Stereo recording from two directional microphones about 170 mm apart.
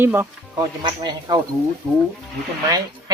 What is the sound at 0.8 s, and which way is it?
Speech, 25° right (ahead or behind).